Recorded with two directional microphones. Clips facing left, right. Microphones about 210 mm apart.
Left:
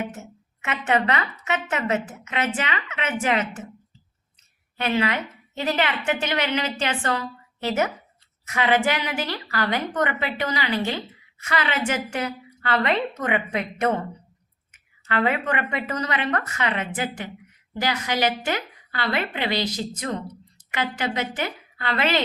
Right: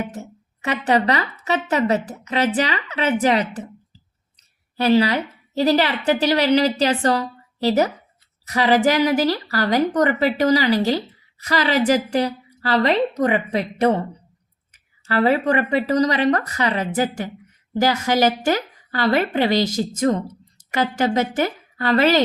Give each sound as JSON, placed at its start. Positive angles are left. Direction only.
{"t": 0.0, "sound": "a woman's voice", "side_deg": -35}
{"t": 4.8, "sound": "a woman's voice", "side_deg": -35}